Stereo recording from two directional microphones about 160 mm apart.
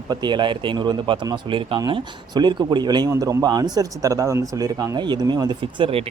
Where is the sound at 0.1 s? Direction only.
30° right (ahead or behind).